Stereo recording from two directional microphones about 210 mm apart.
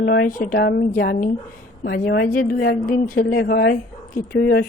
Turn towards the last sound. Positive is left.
turn(degrees=50)  # may be behind; listen again after turning